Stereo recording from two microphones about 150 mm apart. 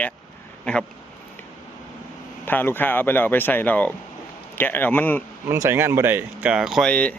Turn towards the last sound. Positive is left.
turn(degrees=5)  # may be behind; listen again after turning